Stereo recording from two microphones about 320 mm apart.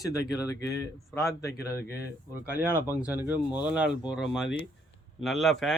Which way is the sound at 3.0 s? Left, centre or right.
Centre.